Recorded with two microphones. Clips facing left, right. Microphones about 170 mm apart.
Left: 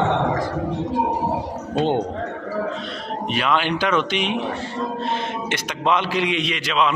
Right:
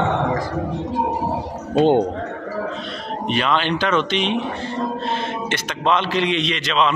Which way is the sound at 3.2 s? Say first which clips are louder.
Right 1 dB; 5° left (ahead or behind).